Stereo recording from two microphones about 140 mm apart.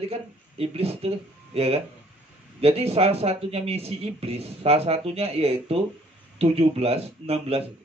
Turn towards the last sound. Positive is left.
turn(degrees=-45)  # may be behind; listen again after turning